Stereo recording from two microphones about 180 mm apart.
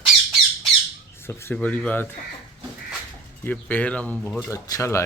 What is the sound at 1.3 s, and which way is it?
Speech, 15° left (ahead or behind).